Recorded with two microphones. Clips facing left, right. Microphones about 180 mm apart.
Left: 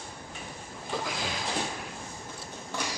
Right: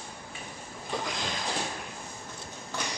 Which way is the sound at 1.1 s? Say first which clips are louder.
Even; 5° left (ahead or behind).